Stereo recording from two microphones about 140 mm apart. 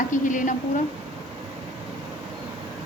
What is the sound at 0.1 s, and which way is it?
Speech, 65° left (ahead or behind).